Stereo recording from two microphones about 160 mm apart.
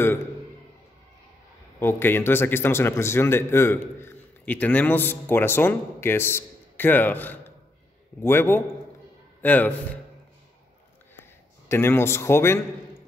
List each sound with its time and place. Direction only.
1.8 s a man's voice: 15° left (ahead or behind)
11.7 s a man's voice: 15° left (ahead or behind)